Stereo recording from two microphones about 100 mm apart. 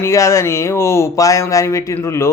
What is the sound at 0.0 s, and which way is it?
Speech, 30° left (ahead or behind).